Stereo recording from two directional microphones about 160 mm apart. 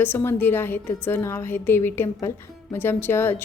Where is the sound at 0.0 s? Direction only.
10° left (ahead or behind).